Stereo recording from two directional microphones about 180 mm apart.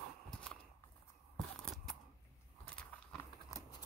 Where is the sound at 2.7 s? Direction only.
5° left (ahead or behind).